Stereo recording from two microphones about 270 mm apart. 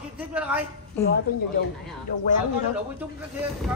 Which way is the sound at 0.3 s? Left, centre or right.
Centre.